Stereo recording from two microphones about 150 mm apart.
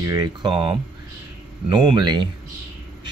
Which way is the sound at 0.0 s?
25° right (ahead or behind).